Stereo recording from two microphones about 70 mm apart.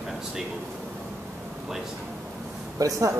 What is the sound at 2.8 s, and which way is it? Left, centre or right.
Speech, right.